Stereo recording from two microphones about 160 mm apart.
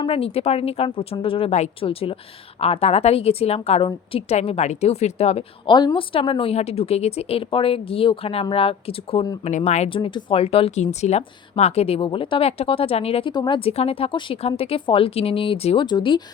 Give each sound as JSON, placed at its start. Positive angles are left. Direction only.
{"t": 0.0, "sound": "a woman's voice", "side_deg": 35}
{"t": 9.4, "sound": "a woman's voice", "side_deg": 45}
{"t": 13.3, "sound": "a woman's voice", "side_deg": 30}